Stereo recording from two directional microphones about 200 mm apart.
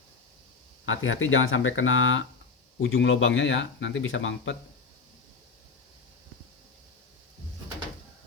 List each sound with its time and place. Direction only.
0.9 s speech: 80° left